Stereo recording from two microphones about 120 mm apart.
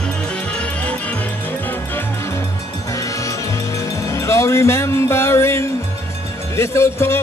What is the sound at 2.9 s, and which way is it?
Music, 25° left (ahead or behind).